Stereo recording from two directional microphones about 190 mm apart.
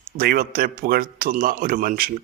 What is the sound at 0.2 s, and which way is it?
A man's voice, 50° right (ahead or behind).